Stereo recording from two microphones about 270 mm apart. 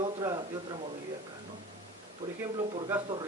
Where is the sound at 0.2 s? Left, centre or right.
Centre.